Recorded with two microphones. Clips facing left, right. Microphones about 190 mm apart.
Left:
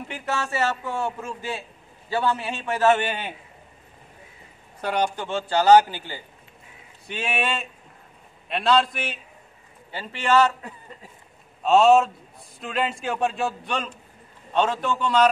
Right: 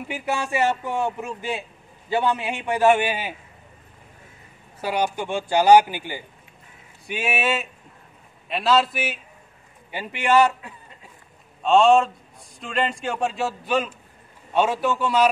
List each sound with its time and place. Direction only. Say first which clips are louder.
0.1 s a man's voice: right 3 dB; 10° right (ahead or behind)
4.7 s a man's voice: right 1 dB; 5° right (ahead or behind)
11.6 s a man's voice: even; 5° left (ahead or behind)